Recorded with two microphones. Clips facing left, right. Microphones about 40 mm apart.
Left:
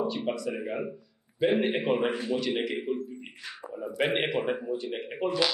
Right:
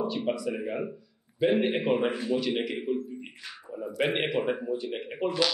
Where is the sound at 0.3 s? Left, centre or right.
Centre.